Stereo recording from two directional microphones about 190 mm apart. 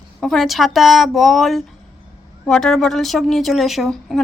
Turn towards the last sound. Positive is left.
turn(degrees=0)  # may be behind; listen again after turning